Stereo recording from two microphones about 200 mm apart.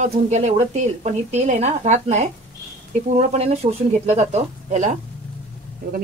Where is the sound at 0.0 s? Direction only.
35° right (ahead or behind).